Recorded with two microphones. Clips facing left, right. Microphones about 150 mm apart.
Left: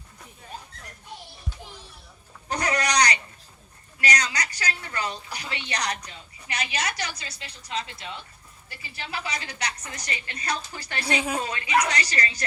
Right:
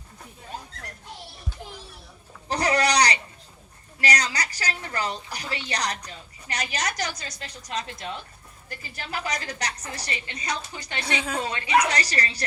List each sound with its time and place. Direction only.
2.5 s a sound: 35° right (ahead or behind)
4.0 s a woman's voice: 35° right (ahead or behind); by 11.0 s 20° right (ahead or behind)
11.4 s a woman's voice: 30° right (ahead or behind)